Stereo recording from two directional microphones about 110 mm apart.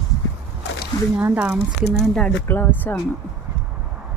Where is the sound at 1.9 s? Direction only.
5° left (ahead or behind).